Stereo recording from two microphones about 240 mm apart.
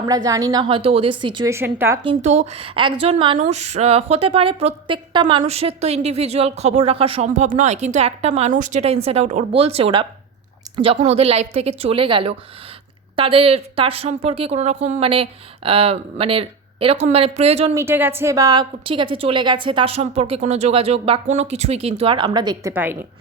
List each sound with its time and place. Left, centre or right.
0.1 s a woman's voice: centre
2.0 s a woman's voice: right
17.7 s a woman's voice: centre